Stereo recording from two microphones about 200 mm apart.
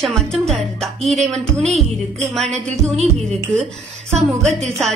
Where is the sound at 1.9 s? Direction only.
Centre (ahead or behind).